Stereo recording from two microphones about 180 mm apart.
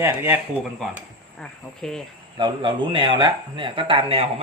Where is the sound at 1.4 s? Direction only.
5° left (ahead or behind).